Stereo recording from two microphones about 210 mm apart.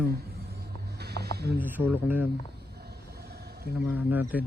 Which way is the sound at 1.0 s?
50° right (ahead or behind).